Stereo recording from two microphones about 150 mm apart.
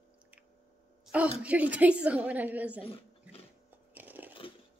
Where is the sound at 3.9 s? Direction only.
10° right (ahead or behind).